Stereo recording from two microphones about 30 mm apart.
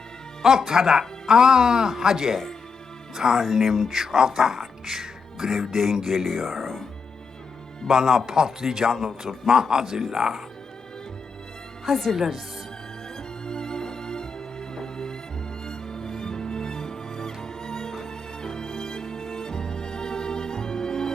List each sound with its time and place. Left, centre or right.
0.7 s speech: centre
6.2 s speech: centre
7.9 s speech: centre
11.9 s a woman's voice: centre
12.1 s speech: centre
13.1 s music: left